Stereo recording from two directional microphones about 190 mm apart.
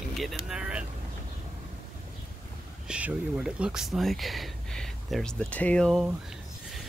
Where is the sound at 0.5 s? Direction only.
5° right (ahead or behind).